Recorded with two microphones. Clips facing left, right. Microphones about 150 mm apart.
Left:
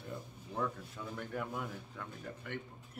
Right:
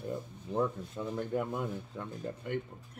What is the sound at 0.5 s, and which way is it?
Speech, 25° right (ahead or behind).